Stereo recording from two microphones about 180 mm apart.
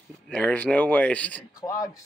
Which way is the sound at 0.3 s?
5° left (ahead or behind).